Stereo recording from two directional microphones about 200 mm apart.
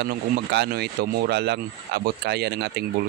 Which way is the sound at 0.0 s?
55° right (ahead or behind).